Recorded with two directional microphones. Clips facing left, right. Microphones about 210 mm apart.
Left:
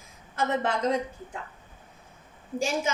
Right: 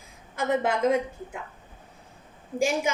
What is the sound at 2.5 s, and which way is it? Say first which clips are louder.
Speech: right 3 dB; 15° right (ahead or behind).